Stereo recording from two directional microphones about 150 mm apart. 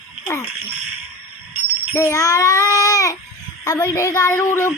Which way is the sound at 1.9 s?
20° left (ahead or behind).